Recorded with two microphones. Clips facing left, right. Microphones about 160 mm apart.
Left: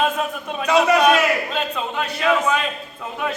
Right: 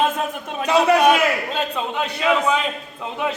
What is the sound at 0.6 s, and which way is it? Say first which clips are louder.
Speech: even; 30° right (ahead or behind).